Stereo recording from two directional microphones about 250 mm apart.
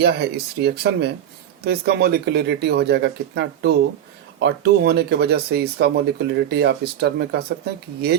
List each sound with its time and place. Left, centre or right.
0.0 s speech: right